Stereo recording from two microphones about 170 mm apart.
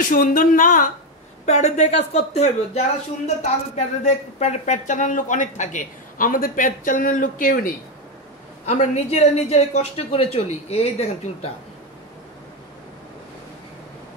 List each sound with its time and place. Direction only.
0.0 s speech: 50° left (ahead or behind)
1.4 s a woman's voice: 40° left (ahead or behind)
8.6 s a woman's voice: 40° left (ahead or behind)